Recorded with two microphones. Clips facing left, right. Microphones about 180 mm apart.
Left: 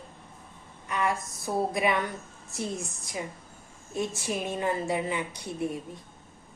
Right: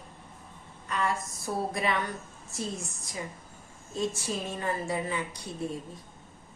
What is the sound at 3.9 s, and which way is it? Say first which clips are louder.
A woman's voice: left 1 dB; 20° left (ahead or behind).